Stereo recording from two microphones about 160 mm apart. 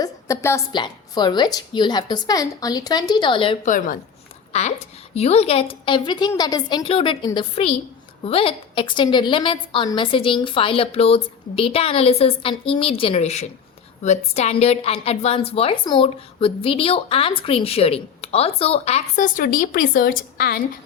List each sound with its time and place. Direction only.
0.0 s a woman's voice: 20° left (ahead or behind)
3.6 s a woman's voice: 55° left (ahead or behind)
4.5 s a woman's voice: 45° left (ahead or behind); by 20.6 s 65° left (ahead or behind)